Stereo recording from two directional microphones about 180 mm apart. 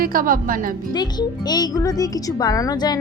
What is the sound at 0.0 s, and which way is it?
Speech, 50° right (ahead or behind).